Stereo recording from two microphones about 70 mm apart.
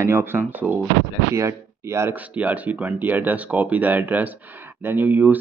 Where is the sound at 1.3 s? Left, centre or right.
Right.